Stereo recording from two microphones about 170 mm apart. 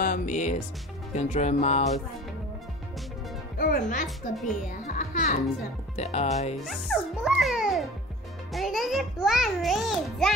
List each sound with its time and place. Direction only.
0.0 s speech: 50° left (ahead or behind)
1.1 s music: 40° left (ahead or behind)
3.5 s speech: 60° left (ahead or behind)
4.8 s music: 45° left (ahead or behind)
6.6 s a child's voice: centre (ahead or behind)